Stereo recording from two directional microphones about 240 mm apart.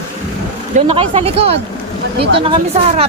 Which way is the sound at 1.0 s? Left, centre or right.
Right.